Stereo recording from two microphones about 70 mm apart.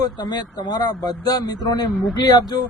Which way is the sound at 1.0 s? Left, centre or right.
Left.